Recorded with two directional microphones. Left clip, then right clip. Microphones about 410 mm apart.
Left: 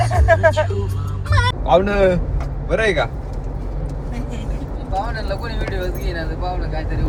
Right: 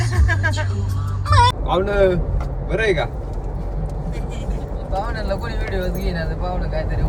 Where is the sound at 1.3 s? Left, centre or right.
Right.